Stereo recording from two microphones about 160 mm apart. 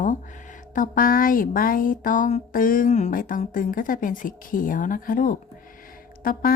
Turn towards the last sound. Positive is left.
turn(degrees=60)  # may be behind; listen again after turning